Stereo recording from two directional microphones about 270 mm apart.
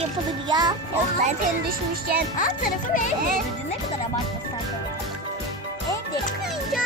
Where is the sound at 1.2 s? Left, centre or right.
Right.